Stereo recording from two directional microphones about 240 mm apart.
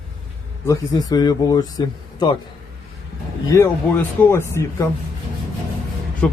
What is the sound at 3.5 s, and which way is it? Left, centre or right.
Speech, centre.